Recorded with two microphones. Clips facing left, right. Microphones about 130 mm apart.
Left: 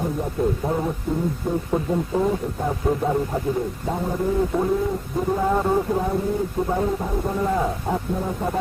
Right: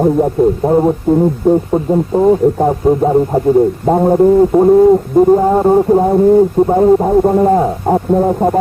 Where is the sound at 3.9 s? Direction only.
60° right (ahead or behind).